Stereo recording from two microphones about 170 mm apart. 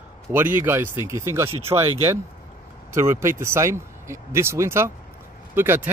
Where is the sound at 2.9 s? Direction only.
15° right (ahead or behind).